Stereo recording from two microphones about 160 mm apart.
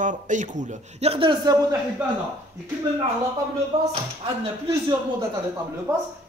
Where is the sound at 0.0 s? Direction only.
50° right (ahead or behind); by 1.8 s 25° right (ahead or behind).